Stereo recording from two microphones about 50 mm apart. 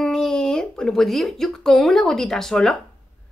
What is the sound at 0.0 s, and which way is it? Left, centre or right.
A woman's voice, centre.